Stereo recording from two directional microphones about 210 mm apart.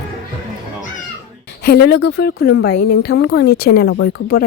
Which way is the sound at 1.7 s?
50° left (ahead or behind).